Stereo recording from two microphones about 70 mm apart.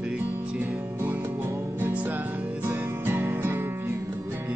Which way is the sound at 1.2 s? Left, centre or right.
Right.